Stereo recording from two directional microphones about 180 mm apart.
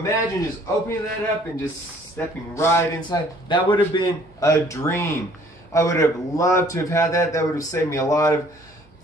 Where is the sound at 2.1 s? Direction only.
15° left (ahead or behind).